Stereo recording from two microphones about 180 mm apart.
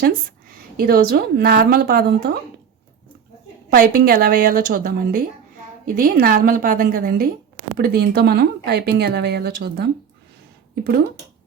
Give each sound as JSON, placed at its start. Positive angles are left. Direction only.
{"t": 0.8, "sound": "speech", "side_deg": -55}
{"t": 3.7, "sound": "speech", "side_deg": -55}